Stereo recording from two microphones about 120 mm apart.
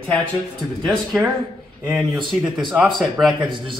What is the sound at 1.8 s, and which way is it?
Speech, 5° right (ahead or behind).